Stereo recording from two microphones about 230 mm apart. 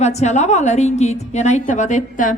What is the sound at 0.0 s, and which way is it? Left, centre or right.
A woman's voice, left.